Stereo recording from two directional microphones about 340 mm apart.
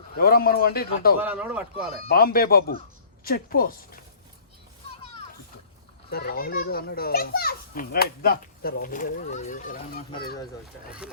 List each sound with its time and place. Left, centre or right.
0.2 s a child's voice: left
1.2 s speech: centre
2.0 s a child's voice: left
6.1 s a child's voice: left